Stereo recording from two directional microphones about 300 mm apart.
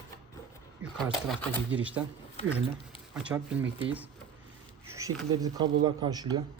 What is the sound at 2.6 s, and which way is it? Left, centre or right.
Speech, centre.